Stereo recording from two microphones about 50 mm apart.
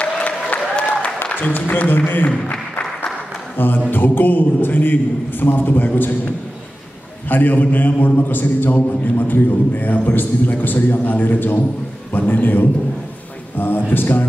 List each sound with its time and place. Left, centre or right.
0.0 s applause: left
1.2 s a man's voice: left
3.5 s a man's voice: left
7.2 s a man's voice: left